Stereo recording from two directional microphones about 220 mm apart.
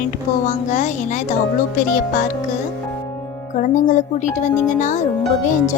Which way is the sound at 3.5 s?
35° left (ahead or behind).